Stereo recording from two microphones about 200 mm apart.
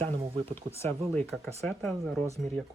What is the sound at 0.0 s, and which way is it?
Speech, 30° right (ahead or behind).